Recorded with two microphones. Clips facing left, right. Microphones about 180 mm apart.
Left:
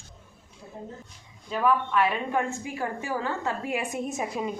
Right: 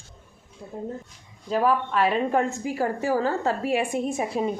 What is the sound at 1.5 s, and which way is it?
A woman's voice, 35° right (ahead or behind).